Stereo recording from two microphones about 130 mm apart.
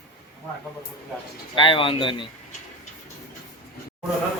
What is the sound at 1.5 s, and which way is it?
Speech, 40° left (ahead or behind).